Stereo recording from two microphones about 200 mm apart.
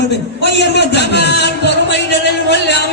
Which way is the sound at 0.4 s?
60° left (ahead or behind).